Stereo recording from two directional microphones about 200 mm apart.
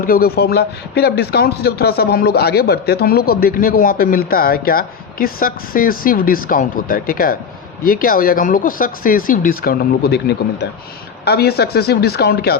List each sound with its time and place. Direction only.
0.0 s speech: 45° left (ahead or behind)